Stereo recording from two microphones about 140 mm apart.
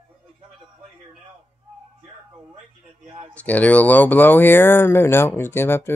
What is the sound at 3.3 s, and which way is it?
Speech, 10° left (ahead or behind).